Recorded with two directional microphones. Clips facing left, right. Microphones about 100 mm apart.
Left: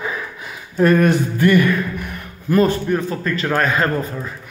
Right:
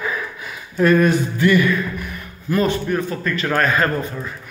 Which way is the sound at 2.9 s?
30° left (ahead or behind).